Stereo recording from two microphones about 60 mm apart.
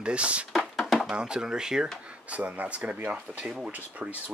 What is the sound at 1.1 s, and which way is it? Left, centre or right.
Speech, centre.